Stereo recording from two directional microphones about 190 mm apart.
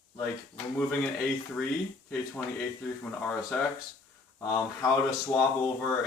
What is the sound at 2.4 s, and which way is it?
Speech, 10° left (ahead or behind).